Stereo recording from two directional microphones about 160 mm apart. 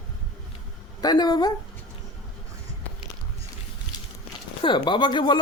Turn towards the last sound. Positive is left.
turn(degrees=30)  # may be behind; listen again after turning